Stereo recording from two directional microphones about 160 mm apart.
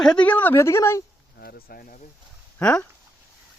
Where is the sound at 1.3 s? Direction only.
75° left (ahead or behind).